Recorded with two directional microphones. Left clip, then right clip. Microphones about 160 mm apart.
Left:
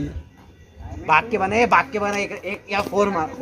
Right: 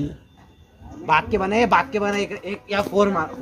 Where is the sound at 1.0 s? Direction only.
80° right.